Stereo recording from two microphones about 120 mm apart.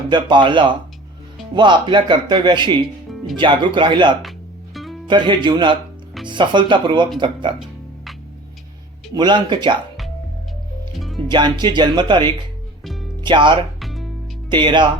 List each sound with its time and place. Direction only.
0.1 s speech: 40° right (ahead or behind)
4.2 s music: centre (ahead or behind)
5.0 s speech: 40° right (ahead or behind)
9.1 s speech: 40° right (ahead or behind)
10.9 s music: centre (ahead or behind)
11.3 s speech: 40° right (ahead or behind)
12.8 s music: centre (ahead or behind)
13.2 s speech: 40° right (ahead or behind)
13.7 s music: centre (ahead or behind)
14.5 s speech: 40° right (ahead or behind)